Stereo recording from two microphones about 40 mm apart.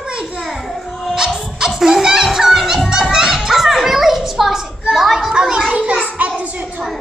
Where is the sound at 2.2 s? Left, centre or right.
Centre.